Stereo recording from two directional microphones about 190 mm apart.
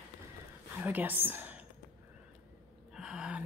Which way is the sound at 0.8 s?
10° right (ahead or behind).